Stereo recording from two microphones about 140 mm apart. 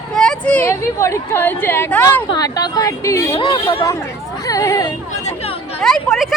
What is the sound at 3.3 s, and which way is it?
Speech, 40° left (ahead or behind).